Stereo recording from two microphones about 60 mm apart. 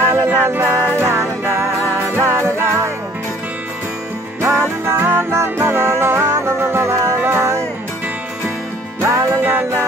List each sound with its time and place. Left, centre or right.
0.0 s music: right
4.4 s music: right
9.0 s music: right
9.4 s music: right